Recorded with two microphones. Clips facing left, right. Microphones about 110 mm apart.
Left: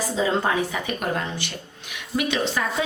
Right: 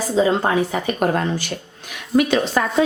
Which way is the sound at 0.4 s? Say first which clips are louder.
Right 5 dB; 40° right (ahead or behind).